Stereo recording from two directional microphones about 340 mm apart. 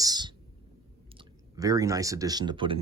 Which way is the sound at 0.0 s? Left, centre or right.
Centre.